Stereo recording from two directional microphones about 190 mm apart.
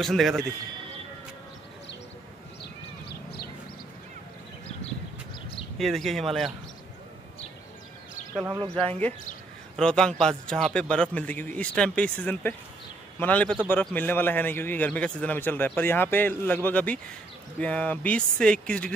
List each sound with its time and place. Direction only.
0.0 s a man's voice: centre (ahead or behind)
2.6 s a sound: 55° left (ahead or behind)
5.8 s a man's voice: centre (ahead or behind)
8.6 s speech: 30° right (ahead or behind)
9.8 s a man's voice: 5° left (ahead or behind)